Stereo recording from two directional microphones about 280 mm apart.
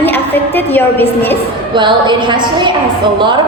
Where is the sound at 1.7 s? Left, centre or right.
Centre.